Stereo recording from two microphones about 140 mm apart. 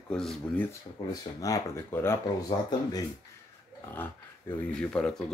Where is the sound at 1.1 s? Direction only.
25° left (ahead or behind).